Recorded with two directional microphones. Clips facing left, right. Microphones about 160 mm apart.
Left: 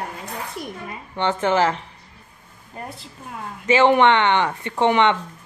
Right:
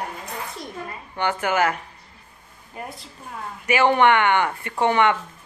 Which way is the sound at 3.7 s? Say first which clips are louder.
Left 2 dB; 25° left (ahead or behind).